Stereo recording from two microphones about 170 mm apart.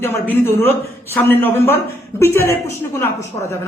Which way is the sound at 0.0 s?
10° left (ahead or behind).